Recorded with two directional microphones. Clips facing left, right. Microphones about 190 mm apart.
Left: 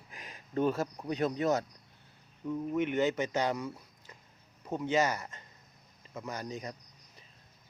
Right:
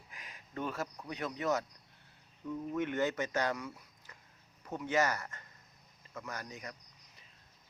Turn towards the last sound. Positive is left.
turn(degrees=25)  # may be behind; listen again after turning